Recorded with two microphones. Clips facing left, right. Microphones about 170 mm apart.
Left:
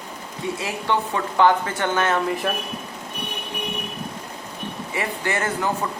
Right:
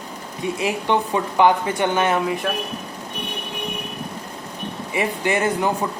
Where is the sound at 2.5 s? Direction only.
Centre (ahead or behind).